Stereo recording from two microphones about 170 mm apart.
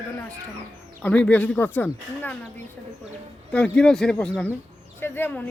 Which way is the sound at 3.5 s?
5° left (ahead or behind).